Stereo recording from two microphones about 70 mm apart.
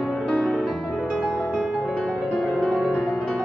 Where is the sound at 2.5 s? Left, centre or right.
Centre.